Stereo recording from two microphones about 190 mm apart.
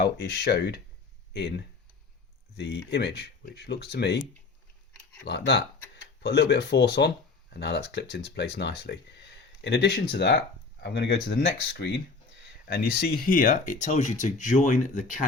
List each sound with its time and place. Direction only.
0.0 s speech: 60° left (ahead or behind)
5.2 s speech: 60° left (ahead or behind); by 15.2 s 45° left (ahead or behind)